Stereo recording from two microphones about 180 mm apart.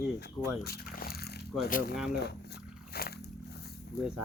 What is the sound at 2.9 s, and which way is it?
Vehicle, 60° left (ahead or behind).